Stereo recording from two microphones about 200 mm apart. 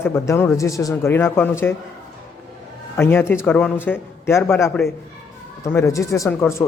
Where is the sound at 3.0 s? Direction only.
10° left (ahead or behind).